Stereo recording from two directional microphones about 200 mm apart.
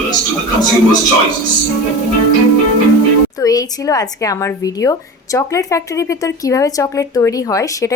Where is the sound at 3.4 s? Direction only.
20° left (ahead or behind).